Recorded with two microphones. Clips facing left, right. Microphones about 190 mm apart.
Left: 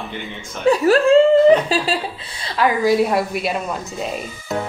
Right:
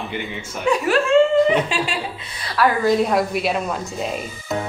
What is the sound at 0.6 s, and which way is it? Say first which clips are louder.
Speech: left 5 dB; 35° left (ahead or behind).